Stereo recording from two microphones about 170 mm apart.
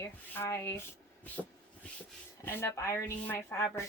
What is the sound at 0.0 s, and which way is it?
Speech, 15° left (ahead or behind).